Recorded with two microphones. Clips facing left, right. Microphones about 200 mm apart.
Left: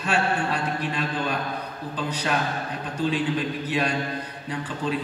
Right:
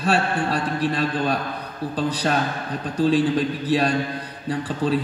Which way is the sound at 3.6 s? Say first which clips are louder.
Right 5 dB; 35° right (ahead or behind).